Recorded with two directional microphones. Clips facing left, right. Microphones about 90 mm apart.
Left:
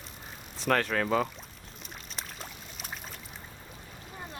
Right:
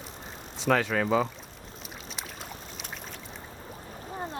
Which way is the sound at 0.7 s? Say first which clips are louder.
Right 2 dB; 5° right (ahead or behind).